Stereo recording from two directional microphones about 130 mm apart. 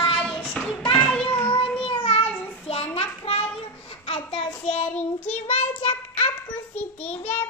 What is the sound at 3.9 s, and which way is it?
Child singing, 45° left (ahead or behind).